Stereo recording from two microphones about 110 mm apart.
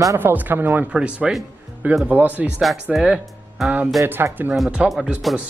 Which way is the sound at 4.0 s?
25° right (ahead or behind).